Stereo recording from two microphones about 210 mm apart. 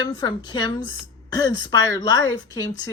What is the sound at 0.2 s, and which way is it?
Speech, 20° left (ahead or behind).